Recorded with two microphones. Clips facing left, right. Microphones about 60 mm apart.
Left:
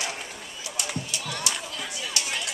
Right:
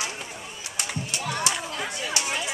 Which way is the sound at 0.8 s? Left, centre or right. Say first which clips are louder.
Right 2 dB; right.